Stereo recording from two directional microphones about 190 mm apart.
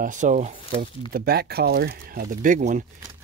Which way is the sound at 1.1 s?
55° right (ahead or behind).